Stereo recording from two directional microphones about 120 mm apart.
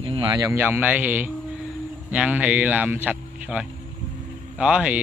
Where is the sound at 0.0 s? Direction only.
50° right (ahead or behind).